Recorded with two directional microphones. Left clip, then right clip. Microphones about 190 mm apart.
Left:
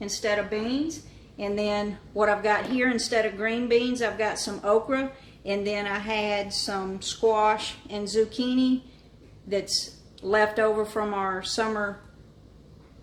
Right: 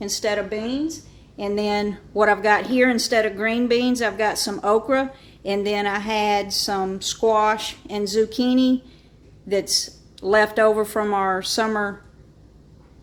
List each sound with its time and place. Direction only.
0.0 s a woman's voice: 50° right (ahead or behind)